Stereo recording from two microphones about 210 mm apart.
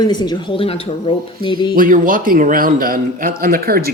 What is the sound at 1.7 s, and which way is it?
A man's voice, 40° right (ahead or behind).